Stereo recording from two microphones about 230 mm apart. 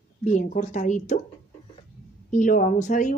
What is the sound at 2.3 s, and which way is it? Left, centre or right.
Speech, left.